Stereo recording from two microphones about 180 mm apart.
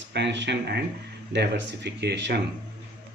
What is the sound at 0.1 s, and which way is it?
Speech, 75° right (ahead or behind).